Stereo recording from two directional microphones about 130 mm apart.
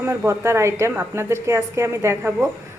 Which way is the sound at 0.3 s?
20° right (ahead or behind).